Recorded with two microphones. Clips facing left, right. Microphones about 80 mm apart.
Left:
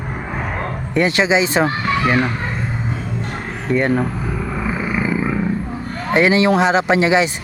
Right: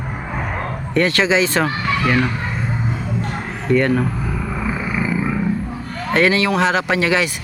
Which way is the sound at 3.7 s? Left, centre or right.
Centre.